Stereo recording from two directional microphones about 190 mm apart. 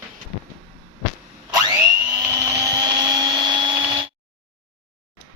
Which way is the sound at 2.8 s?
20° right (ahead or behind).